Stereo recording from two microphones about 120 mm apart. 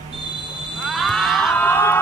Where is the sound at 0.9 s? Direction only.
Centre (ahead or behind).